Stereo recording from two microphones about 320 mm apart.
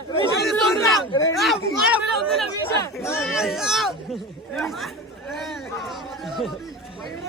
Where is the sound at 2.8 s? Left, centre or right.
Centre.